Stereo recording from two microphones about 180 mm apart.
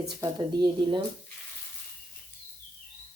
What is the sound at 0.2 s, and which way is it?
Speech, 25° right (ahead or behind).